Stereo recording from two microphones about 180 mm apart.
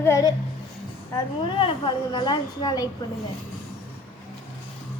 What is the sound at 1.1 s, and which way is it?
A woman's voice, 30° left (ahead or behind).